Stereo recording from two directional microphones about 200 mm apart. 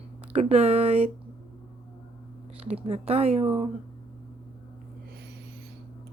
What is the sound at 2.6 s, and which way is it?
Speech, 30° right (ahead or behind).